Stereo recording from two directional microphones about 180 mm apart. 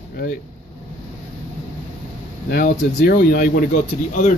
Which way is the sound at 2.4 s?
55° left (ahead or behind).